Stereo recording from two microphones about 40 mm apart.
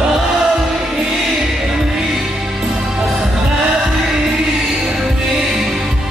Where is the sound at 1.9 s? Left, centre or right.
Centre.